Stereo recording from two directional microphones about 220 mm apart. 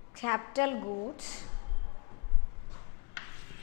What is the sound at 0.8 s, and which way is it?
Speech, 30° left (ahead or behind).